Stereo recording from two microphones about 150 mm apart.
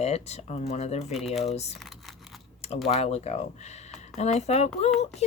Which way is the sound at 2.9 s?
45° left (ahead or behind).